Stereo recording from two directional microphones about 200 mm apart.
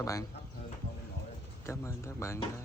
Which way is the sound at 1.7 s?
15° left (ahead or behind).